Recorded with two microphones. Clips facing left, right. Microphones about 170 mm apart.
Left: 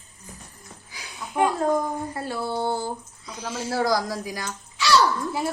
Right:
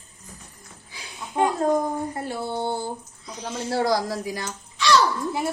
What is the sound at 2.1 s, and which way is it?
Speech, 20° right (ahead or behind).